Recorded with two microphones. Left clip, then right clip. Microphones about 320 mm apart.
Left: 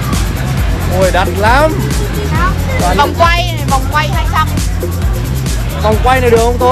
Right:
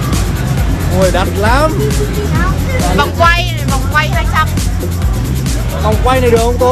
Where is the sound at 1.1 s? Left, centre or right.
Left.